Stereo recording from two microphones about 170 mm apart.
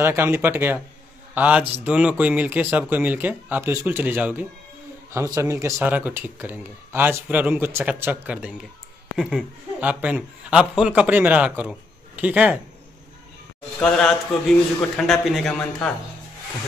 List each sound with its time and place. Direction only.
0.0 s a man's voice: 15° right (ahead or behind)
13.7 s a man's voice: 5° left (ahead or behind)